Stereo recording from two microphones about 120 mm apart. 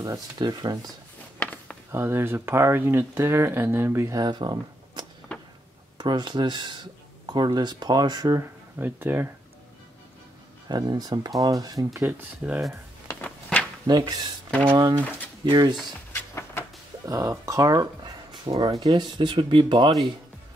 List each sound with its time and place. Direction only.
0.0 s speech: 30° right (ahead or behind)
1.4 s a sound: 15° left (ahead or behind)
1.9 s speech: 20° right (ahead or behind)
8.4 s speech: 20° right (ahead or behind)
10.7 s speech: 35° right (ahead or behind)
12.1 s speech: 10° right (ahead or behind)
13.1 s a sound: 10° left (ahead or behind)
13.8 s speech: 35° right (ahead or behind)
15.4 s speech: 40° right (ahead or behind)
16.1 s vehicle: 20° left (ahead or behind)
17.0 s speech: 30° right (ahead or behind)